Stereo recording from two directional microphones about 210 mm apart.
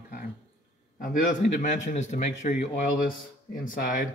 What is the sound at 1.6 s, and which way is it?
Speech, 35° left (ahead or behind).